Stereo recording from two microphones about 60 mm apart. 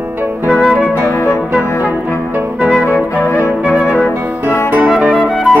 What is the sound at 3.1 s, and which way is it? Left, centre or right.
Music, left.